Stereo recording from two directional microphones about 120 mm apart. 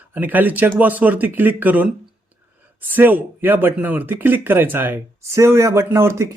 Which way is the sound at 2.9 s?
15° right (ahead or behind).